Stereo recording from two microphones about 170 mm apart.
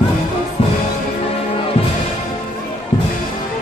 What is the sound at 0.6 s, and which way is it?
Music, 35° left (ahead or behind).